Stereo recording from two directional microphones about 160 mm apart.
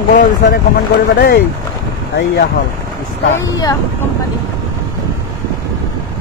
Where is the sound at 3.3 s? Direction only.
20° left (ahead or behind).